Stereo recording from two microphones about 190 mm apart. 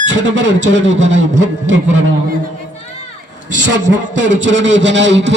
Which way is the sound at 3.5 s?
70° right (ahead or behind).